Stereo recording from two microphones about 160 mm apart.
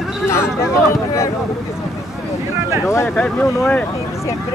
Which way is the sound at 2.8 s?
15° left (ahead or behind).